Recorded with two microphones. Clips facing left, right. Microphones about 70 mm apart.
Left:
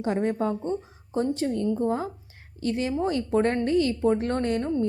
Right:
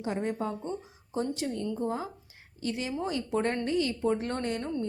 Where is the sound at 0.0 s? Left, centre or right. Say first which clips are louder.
Left 6 dB; left.